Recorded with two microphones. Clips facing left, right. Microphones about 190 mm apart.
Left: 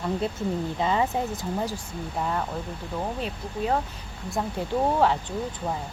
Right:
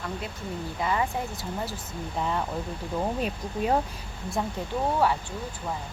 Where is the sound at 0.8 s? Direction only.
20° left (ahead or behind).